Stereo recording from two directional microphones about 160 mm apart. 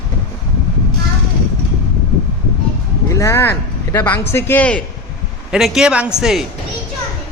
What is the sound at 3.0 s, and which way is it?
Speech, 20° left (ahead or behind).